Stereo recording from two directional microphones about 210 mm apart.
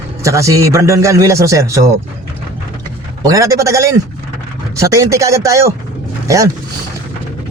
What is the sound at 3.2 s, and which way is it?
A man's voice, 15° right (ahead or behind).